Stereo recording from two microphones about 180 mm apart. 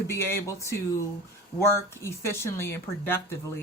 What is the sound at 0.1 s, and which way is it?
A man's voice, 15° left (ahead or behind).